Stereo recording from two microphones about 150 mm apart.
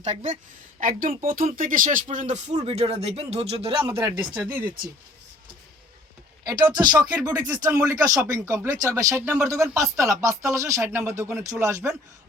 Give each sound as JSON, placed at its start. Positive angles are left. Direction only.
{"t": 0.0, "sound": "speech", "side_deg": -50}
{"t": 0.8, "sound": "speech", "side_deg": -65}
{"t": 4.4, "sound": "speech", "side_deg": -15}
{"t": 6.4, "sound": "speech", "side_deg": -25}